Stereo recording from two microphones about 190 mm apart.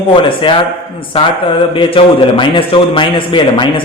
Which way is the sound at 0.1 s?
25° left (ahead or behind).